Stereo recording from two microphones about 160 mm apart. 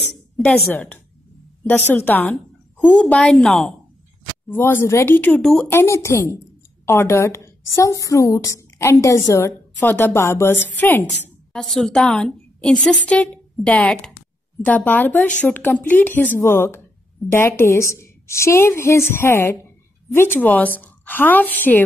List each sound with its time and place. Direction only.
0.7 s a woman's voice: 10° left (ahead or behind)
5.7 s a woman's voice: 15° left (ahead or behind)